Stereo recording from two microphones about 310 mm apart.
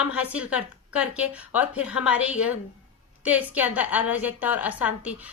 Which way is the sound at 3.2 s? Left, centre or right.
Centre.